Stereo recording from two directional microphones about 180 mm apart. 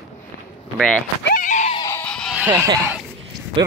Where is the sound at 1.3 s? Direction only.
45° left (ahead or behind).